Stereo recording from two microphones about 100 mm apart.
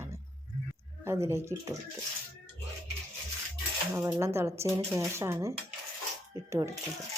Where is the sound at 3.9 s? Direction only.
30° right (ahead or behind).